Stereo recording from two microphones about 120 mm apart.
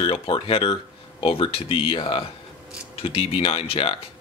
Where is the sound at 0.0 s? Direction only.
50° left (ahead or behind).